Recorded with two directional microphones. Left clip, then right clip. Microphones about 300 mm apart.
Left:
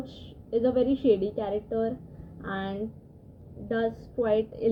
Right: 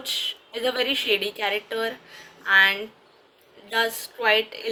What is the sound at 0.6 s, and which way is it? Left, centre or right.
A woman's voice, centre.